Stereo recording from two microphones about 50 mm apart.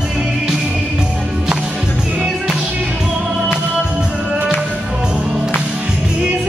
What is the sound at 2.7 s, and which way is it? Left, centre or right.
Music, right.